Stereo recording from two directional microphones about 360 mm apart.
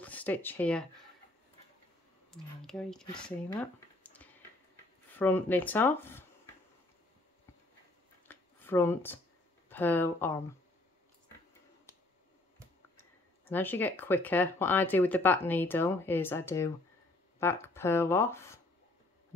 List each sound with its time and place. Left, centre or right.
0.0 s speech: centre
2.3 s speech: centre
8.3 s a sound: centre
9.7 s speech: centre
13.5 s speech: centre